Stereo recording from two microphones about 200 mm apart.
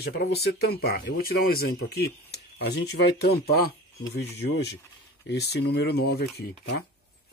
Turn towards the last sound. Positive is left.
turn(degrees=50)  # may be behind; listen again after turning